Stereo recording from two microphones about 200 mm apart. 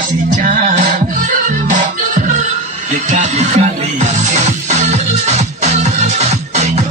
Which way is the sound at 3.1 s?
35° right (ahead or behind).